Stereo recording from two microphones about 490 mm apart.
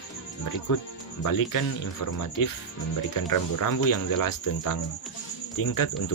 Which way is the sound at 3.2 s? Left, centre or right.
Left.